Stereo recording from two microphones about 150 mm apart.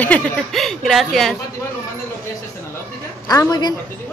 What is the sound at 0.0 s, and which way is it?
Speech, 5° left (ahead or behind).